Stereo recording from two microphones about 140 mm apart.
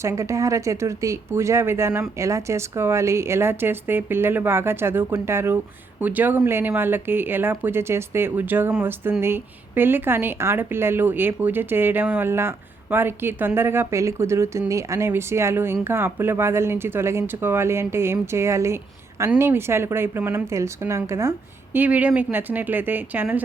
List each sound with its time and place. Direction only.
0.0 s speech: 20° right (ahead or behind)